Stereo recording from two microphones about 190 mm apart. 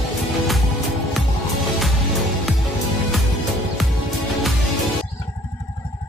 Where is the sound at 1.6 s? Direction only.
Centre (ahead or behind).